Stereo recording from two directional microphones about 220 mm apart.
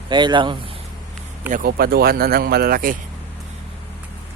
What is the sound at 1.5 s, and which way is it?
A man's voice, 40° right (ahead or behind).